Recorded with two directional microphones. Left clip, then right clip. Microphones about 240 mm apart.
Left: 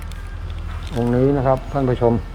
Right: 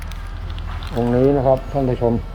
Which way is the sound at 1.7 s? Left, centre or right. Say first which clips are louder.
Left 1 dB; left.